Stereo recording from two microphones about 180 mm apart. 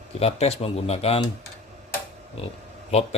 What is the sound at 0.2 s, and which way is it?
Coin, 35° left (ahead or behind).